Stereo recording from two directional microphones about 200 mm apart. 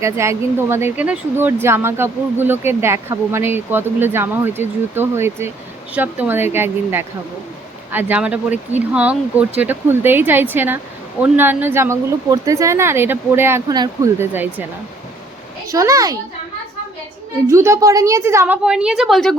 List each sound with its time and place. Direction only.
0.0 s speech: 15° right (ahead or behind)
15.6 s speech: 15° right (ahead or behind)
17.5 s speech: 15° right (ahead or behind); by 19.4 s centre (ahead or behind)